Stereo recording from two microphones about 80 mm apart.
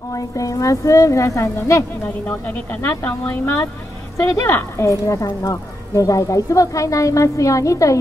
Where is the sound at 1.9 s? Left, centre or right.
Left.